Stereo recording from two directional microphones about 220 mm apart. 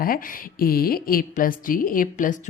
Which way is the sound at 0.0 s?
40° left (ahead or behind).